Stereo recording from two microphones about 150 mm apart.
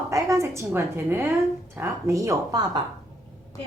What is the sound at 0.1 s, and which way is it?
A woman's voice, 20° right (ahead or behind).